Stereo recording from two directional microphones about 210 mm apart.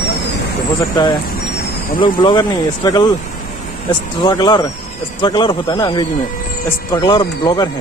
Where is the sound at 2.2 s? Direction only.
20° left (ahead or behind).